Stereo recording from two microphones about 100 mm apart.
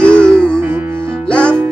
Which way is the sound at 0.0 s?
10° left (ahead or behind).